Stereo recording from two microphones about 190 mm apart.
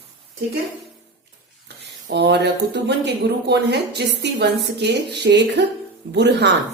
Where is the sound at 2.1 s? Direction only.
65° right (ahead or behind).